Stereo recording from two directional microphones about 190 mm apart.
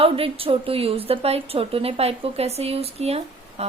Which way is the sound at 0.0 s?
30° right (ahead or behind).